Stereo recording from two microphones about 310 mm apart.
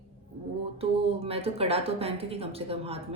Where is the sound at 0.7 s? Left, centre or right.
Centre.